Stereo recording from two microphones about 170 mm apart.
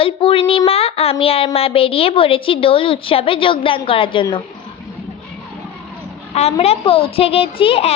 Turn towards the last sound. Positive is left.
turn(degrees=35)  # may be behind; listen again after turning